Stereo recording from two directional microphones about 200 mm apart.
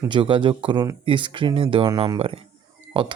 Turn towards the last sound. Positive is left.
turn(degrees=-25)  # may be behind; listen again after turning